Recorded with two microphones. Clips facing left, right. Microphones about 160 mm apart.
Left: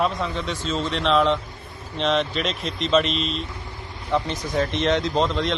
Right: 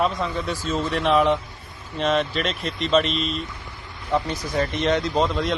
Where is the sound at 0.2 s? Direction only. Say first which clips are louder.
Right 1 dB; 5° right (ahead or behind).